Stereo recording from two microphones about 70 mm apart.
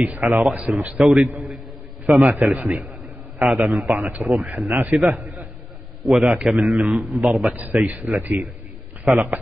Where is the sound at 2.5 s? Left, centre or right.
Centre.